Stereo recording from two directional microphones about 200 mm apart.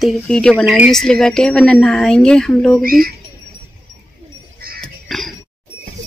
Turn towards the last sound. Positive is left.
turn(degrees=0)  # may be behind; listen again after turning